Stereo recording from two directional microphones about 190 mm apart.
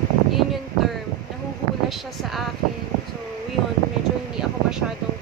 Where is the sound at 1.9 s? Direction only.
Centre (ahead or behind).